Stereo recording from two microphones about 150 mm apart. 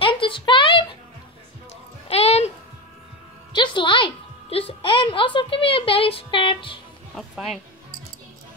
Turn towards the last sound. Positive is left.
turn(degrees=0)  # may be behind; listen again after turning